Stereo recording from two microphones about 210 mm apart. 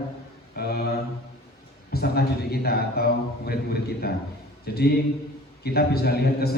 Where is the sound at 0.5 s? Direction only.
45° left (ahead or behind).